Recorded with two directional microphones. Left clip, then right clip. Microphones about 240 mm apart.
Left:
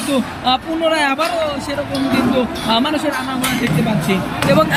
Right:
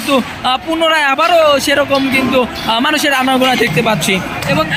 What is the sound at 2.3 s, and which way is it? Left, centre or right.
Speech, centre.